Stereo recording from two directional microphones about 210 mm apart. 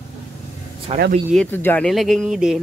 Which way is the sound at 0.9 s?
30° right (ahead or behind).